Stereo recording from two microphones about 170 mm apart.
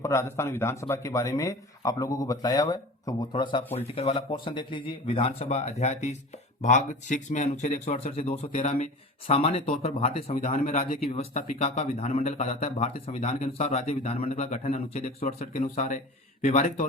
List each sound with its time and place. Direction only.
0.0 s speech: 15° left (ahead or behind)
3.6 s speech: 15° left (ahead or behind)
3.9 s speech: 30° left (ahead or behind)